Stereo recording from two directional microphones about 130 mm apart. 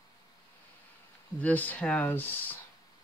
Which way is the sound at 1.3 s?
10° left (ahead or behind).